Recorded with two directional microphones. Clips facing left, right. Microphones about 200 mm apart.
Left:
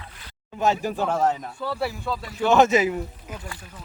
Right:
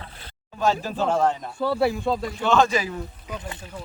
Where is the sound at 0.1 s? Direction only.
30° right (ahead or behind).